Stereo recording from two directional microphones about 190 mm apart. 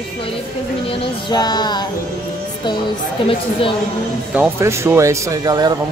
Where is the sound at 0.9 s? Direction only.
20° left (ahead or behind).